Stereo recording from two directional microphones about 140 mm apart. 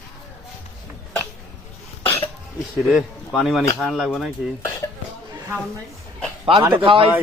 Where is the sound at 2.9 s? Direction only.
5° right (ahead or behind).